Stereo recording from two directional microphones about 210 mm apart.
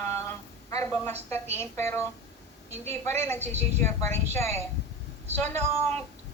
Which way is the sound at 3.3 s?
30° right (ahead or behind).